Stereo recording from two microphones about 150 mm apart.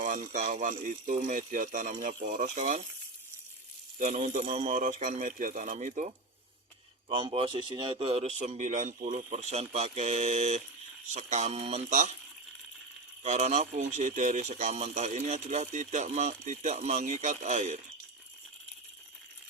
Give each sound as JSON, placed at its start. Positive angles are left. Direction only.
{"t": 0.0, "sound": "speech", "side_deg": -55}
{"t": 3.9, "sound": "speech", "side_deg": -55}
{"t": 7.1, "sound": "speech", "side_deg": -35}
{"t": 13.2, "sound": "speech", "side_deg": -50}